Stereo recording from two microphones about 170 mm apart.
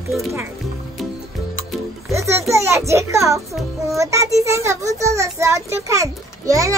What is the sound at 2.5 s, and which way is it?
A child's voice, 15° right (ahead or behind).